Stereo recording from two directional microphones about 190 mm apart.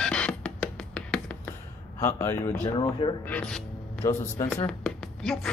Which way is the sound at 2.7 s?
25° left (ahead or behind).